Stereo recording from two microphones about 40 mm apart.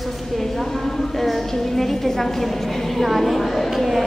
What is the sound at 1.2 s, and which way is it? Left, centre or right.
A woman's voice, centre.